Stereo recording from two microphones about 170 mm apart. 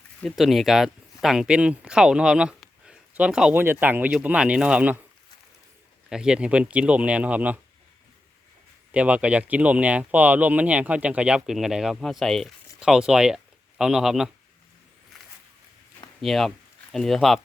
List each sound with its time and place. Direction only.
0.2 s speech: centre (ahead or behind)
6.1 s speech: 5° right (ahead or behind)
8.9 s speech: 5° right (ahead or behind)
16.2 s speech: centre (ahead or behind)